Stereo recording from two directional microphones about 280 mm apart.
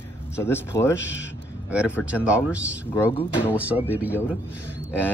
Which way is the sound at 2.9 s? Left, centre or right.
Centre.